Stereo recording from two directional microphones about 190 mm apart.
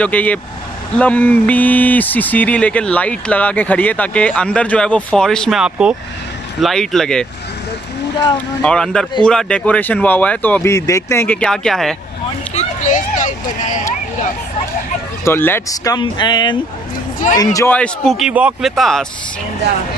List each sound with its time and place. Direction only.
0.0 s speech: 10° left (ahead or behind)
8.6 s speech: 5° left (ahead or behind)
12.5 s a sound: 40° left (ahead or behind)
15.2 s speech: 10° left (ahead or behind)
17.7 s speech: 5° left (ahead or behind)